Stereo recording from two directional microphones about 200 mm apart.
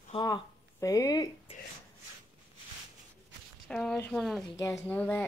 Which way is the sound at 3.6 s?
5° left (ahead or behind).